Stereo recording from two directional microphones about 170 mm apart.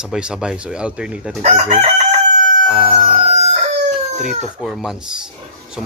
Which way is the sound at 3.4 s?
40° right (ahead or behind).